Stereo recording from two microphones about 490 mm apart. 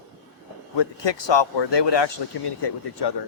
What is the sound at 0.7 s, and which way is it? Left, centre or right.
A man's voice, left.